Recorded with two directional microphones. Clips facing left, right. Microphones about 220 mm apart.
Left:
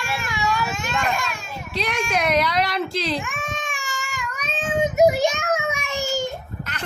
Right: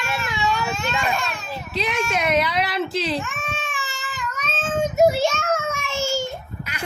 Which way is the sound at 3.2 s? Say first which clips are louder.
Left 1 dB; 15° left (ahead or behind).